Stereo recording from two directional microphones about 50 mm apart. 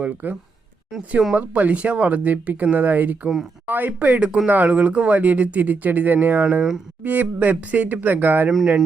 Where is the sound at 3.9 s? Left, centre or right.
Right.